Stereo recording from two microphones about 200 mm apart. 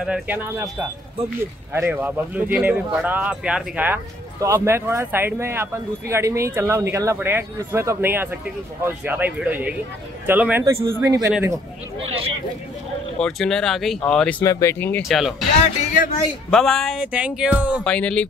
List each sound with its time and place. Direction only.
0.0 s speech: 5° right (ahead or behind)
13.2 s speech: 5° left (ahead or behind)
15.9 s a man's voice: 40° left (ahead or behind)
16.4 s speech: centre (ahead or behind)
17.8 s speech: 5° left (ahead or behind)